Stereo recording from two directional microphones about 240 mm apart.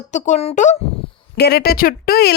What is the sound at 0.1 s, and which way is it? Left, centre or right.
Speech, left.